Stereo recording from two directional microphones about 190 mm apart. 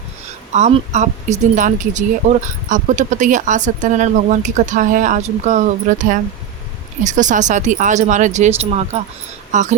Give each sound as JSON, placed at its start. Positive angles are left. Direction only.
{"t": 0.5, "sound": "speech", "side_deg": -35}